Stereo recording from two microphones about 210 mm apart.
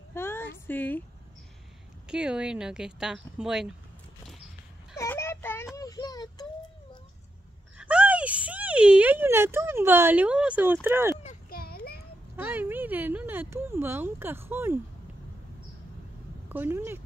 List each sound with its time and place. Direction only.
0.1 s a sound: 10° left (ahead or behind)
2.0 s speech: 5° right (ahead or behind)
4.9 s child singing: 15° left (ahead or behind)
7.7 s speech: 5° right (ahead or behind)
11.5 s a sound: 45° left (ahead or behind)
12.4 s speech: 10° right (ahead or behind)
16.4 s speech: 10° right (ahead or behind)